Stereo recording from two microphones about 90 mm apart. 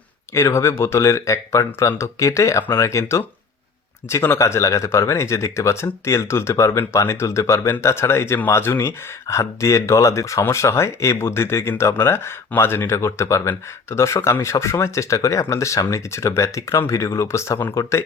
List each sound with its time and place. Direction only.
0.3 s speech: 30° left (ahead or behind)